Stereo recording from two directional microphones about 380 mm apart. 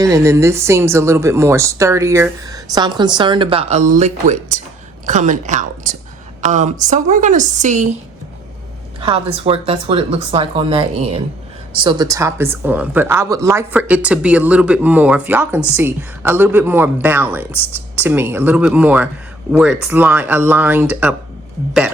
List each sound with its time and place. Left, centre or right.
0.0 s speech: centre
9.0 s a woman's voice: centre